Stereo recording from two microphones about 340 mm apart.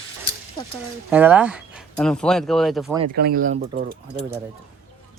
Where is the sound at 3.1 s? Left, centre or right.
Right.